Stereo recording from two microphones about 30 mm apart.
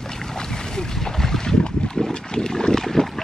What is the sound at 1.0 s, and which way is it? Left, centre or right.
Boat, centre.